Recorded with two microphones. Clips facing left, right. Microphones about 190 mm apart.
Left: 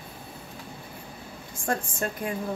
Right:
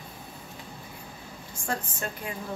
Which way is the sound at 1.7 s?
50° left (ahead or behind).